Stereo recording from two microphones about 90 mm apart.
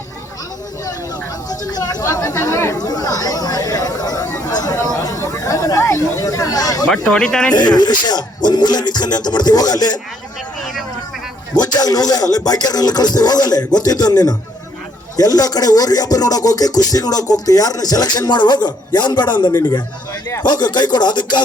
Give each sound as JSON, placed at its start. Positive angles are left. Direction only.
{"t": 1.5, "sound": "speech", "side_deg": 45}
{"t": 6.8, "sound": "speech", "side_deg": 10}
{"t": 7.5, "sound": "speech", "side_deg": 55}
{"t": 11.5, "sound": "a man's voice", "side_deg": 45}